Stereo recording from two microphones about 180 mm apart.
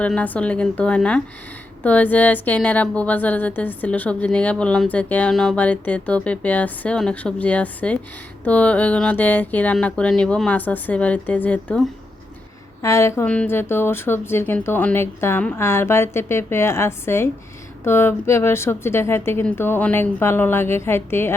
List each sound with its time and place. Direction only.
0.0 s a woman's voice: 10° left (ahead or behind)